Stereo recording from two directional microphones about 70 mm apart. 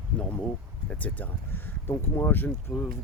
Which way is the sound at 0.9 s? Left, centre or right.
Left.